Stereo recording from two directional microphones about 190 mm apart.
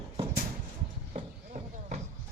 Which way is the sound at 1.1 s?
35° right (ahead or behind).